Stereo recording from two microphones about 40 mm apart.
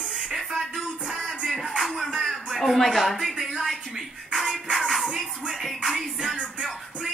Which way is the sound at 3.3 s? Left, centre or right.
Centre.